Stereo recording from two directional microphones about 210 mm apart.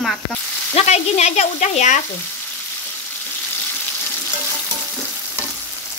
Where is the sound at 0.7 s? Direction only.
30° left (ahead or behind).